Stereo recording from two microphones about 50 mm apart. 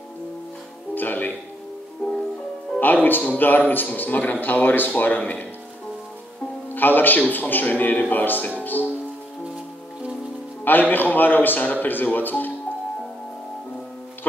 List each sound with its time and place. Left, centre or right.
0.9 s music: left
2.0 s music: centre
2.8 s a man's voice: left
6.7 s a man's voice: left
8.6 s music: left
10.6 s a man's voice: left